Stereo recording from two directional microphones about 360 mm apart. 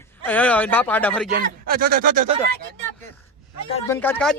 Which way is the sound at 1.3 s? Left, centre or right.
Right.